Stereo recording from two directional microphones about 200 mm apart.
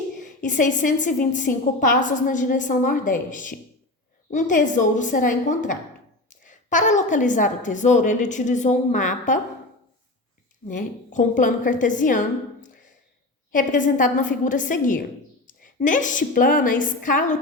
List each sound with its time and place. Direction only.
0.2 s a woman's voice: 40° left (ahead or behind)
10.7 s a woman's voice: 40° left (ahead or behind)
13.5 s a woman's voice: 40° left (ahead or behind)